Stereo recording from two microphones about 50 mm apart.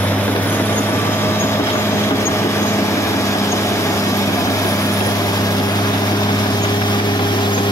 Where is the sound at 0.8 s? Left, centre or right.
Left.